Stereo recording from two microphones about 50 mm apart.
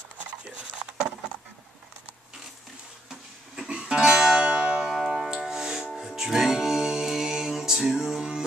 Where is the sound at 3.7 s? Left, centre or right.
Centre.